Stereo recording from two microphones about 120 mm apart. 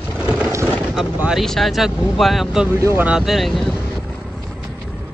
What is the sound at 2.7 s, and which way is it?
Speech, 20° right (ahead or behind).